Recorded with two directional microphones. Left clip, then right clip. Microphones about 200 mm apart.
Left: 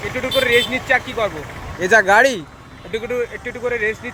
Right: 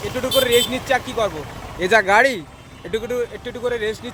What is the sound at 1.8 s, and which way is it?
Speech, centre (ahead or behind).